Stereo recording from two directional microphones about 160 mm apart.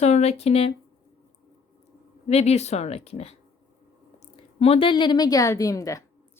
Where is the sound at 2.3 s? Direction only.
40° left (ahead or behind).